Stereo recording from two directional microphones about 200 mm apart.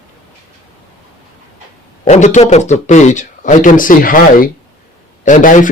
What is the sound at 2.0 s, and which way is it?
A man's voice, 35° left (ahead or behind).